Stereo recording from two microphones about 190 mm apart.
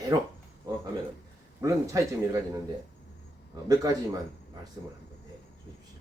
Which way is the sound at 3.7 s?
20° right (ahead or behind).